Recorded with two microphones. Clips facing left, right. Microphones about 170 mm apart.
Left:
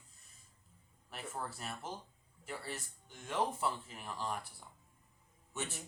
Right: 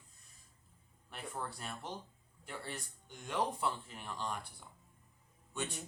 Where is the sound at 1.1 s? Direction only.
5° left (ahead or behind).